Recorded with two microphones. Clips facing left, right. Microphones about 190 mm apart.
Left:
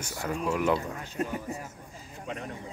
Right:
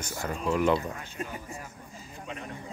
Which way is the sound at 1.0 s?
40° left (ahead or behind).